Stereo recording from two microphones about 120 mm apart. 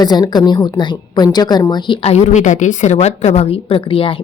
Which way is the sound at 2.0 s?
65° left (ahead or behind).